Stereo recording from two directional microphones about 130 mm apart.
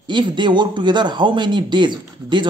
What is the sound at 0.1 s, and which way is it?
Speech, 35° right (ahead or behind).